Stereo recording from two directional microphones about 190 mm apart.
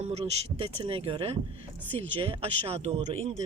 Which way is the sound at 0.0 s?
35° right (ahead or behind).